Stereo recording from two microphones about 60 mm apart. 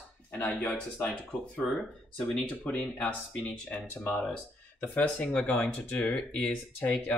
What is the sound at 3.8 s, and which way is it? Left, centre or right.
Speech, left.